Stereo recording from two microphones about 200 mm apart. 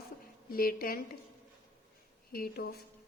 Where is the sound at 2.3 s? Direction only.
50° left (ahead or behind).